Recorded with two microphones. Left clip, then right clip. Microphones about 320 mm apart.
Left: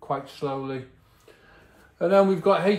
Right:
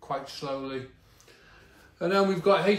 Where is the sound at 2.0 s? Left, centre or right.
Centre.